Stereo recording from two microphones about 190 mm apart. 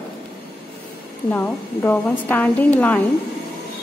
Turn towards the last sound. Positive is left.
turn(degrees=10)  # may be behind; listen again after turning